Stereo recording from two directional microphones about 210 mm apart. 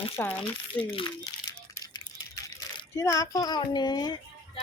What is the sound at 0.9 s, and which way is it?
Crumpling, 20° left (ahead or behind).